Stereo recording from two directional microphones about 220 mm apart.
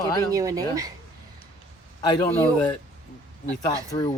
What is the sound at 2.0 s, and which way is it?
Speech, 15° left (ahead or behind).